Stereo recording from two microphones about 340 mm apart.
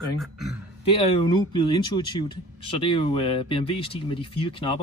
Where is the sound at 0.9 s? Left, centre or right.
Centre.